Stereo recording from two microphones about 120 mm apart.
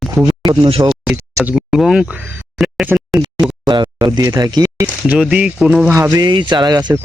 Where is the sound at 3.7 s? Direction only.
40° right (ahead or behind).